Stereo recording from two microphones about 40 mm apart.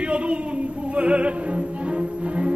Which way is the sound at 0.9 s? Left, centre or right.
Right.